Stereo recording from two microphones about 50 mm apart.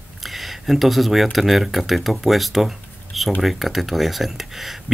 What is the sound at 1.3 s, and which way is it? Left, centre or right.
Speech, centre.